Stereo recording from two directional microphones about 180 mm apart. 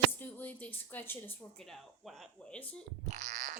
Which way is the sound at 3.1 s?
40° right (ahead or behind).